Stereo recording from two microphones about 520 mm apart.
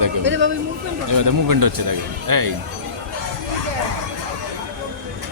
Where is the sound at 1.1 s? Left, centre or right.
Right.